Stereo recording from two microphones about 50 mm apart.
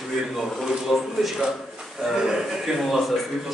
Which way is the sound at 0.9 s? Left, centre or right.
Centre.